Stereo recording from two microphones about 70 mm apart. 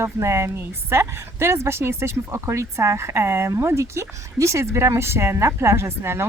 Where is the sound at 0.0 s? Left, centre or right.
Right.